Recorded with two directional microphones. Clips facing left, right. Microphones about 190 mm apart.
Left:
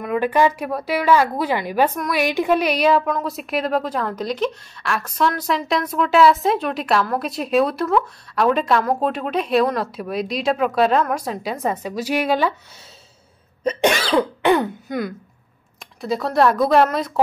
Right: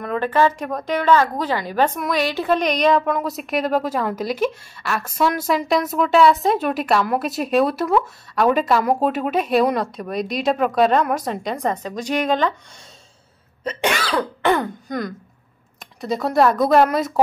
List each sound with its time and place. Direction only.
0.0 s a woman's voice: 10° left (ahead or behind)
13.9 s cough: 25° left (ahead or behind)
14.6 s throat clearing: 5° left (ahead or behind)
16.0 s speech: centre (ahead or behind)